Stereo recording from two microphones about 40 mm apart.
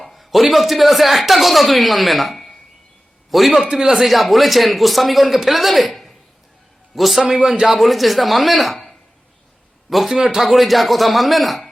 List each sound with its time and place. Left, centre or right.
0.0 s a man's voice: centre
3.6 s speech: centre
3.9 s speech: centre